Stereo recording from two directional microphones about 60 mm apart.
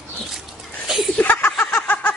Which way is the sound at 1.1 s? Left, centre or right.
Left.